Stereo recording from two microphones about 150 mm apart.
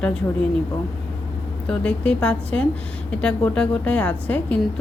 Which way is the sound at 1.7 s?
5° left (ahead or behind).